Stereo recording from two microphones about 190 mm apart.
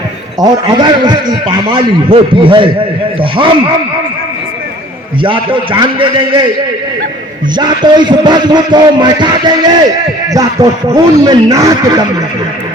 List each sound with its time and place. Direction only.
0.3 s a man's voice: 20° right (ahead or behind)
5.2 s a man's voice: 25° right (ahead or behind)
7.5 s a man's voice: 20° right (ahead or behind)